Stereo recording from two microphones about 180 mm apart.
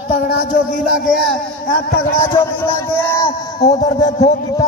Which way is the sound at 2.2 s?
15° left (ahead or behind).